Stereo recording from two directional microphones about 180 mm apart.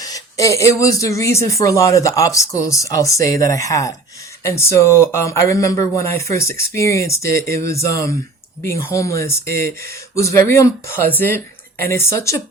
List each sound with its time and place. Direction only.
0.0 s speech: 20° left (ahead or behind)
7.3 s speech: 55° right (ahead or behind)
7.6 s speech: 15° left (ahead or behind)
9.5 s speech: 55° right (ahead or behind)
9.9 s speech: 15° left (ahead or behind)